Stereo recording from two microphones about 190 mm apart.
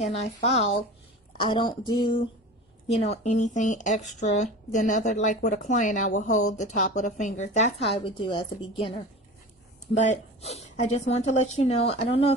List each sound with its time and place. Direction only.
0.0 s speech: 35° left (ahead or behind)
1.4 s a sound: 25° left (ahead or behind)
2.9 s speech: 35° left (ahead or behind)
9.9 s speech: 35° left (ahead or behind)